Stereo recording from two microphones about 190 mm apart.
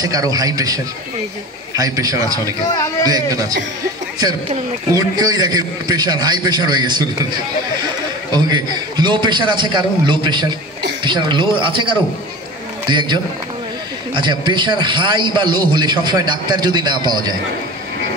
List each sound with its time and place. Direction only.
0.0 s a man's voice: 20° right (ahead or behind)
1.8 s a man's voice: 20° right (ahead or behind)
2.6 s a man's voice: 20° left (ahead or behind)
3.1 s a man's voice: 20° right (ahead or behind)
4.9 s a man's voice: 20° right (ahead or behind)